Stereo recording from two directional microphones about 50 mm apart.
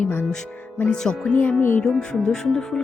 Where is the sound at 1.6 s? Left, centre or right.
Left.